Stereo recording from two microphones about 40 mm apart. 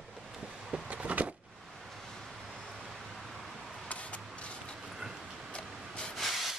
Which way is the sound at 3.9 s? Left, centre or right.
Left.